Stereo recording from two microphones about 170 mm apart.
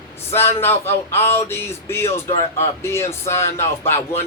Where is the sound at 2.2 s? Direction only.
40° left (ahead or behind).